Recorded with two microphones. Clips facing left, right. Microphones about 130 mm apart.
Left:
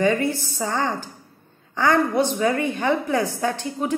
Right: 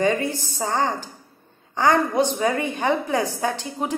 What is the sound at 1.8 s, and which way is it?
A woman's voice, 20° right (ahead or behind).